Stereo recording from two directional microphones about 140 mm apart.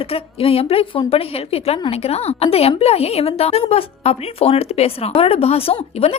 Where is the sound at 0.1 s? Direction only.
45° left (ahead or behind).